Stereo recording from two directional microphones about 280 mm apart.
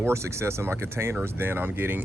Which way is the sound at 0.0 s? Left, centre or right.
Centre.